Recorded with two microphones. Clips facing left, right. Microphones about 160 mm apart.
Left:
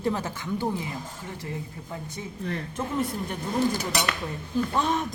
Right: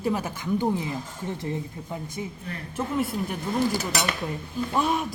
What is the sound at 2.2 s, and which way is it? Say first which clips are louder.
Speech: right 5 dB; 15° right (ahead or behind).